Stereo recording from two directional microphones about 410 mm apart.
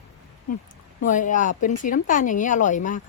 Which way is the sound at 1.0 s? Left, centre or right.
Centre.